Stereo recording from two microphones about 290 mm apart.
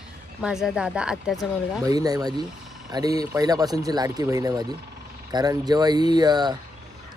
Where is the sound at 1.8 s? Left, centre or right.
Centre.